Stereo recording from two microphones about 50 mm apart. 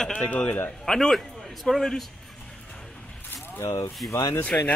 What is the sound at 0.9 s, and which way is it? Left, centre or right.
A man's voice, centre.